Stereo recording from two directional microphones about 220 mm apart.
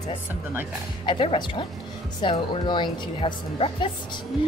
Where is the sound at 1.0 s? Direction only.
25° left (ahead or behind).